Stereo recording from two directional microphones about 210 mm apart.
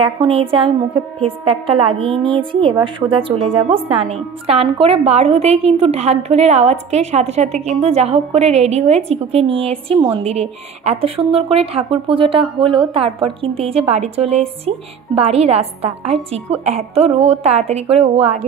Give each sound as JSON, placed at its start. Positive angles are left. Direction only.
{"t": 0.0, "sound": "speech", "side_deg": -25}